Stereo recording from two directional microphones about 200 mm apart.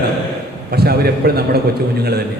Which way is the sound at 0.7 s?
50° right (ahead or behind).